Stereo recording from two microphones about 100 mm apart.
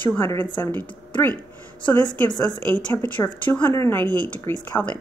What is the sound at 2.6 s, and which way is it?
Speech, 15° left (ahead or behind).